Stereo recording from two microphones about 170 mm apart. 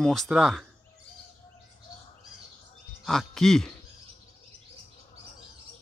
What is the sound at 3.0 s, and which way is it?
Speech, centre (ahead or behind).